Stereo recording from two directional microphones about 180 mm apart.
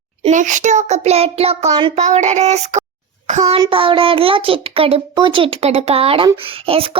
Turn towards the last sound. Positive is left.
turn(degrees=-30)  # may be behind; listen again after turning